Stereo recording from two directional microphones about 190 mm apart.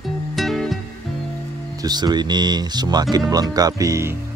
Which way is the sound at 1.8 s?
20° right (ahead or behind).